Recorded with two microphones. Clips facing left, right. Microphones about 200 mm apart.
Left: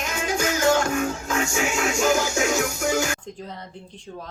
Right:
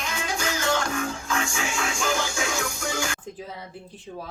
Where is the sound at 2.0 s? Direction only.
45° left (ahead or behind).